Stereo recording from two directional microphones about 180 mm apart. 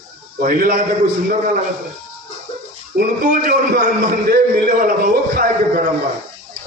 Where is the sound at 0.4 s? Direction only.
50° right (ahead or behind).